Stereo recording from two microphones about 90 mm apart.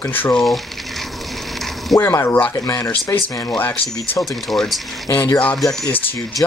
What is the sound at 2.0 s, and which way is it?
Speech, 30° left (ahead or behind).